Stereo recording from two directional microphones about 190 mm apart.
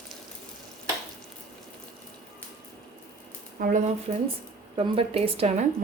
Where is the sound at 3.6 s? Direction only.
50° right (ahead or behind).